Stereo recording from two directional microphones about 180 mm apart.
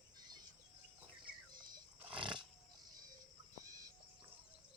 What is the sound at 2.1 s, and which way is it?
Roaring cats, 30° right (ahead or behind).